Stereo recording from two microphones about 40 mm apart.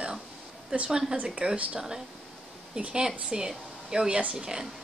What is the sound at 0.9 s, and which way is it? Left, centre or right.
Speech, centre.